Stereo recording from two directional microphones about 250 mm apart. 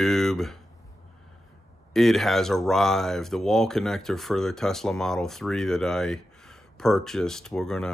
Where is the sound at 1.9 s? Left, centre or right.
Centre.